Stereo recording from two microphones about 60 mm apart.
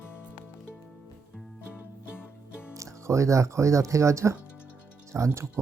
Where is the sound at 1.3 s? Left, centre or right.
Centre.